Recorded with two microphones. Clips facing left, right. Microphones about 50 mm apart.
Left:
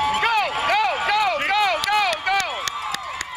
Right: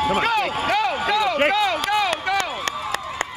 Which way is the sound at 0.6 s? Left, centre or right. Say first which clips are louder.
Left 1 dB; left.